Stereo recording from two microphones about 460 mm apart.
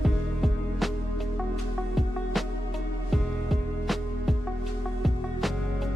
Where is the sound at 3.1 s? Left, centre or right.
Centre.